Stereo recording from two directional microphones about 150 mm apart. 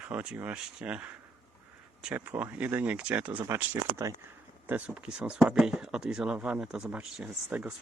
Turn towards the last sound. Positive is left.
turn(degrees=-5)  # may be behind; listen again after turning